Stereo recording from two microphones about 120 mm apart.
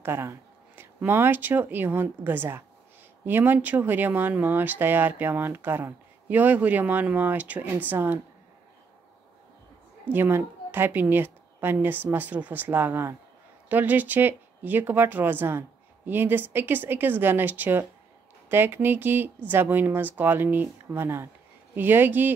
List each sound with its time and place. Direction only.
0.0 s speech: 20° right (ahead or behind)
10.1 s speech: 15° right (ahead or behind)